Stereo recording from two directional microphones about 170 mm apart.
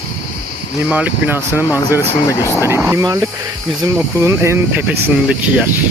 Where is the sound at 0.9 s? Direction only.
10° right (ahead or behind).